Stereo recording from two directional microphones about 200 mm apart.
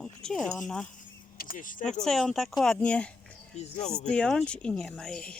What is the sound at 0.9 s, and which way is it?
Vehicle, 45° left (ahead or behind).